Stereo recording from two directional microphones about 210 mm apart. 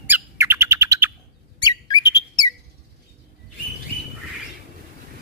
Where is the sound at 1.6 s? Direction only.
20° left (ahead or behind).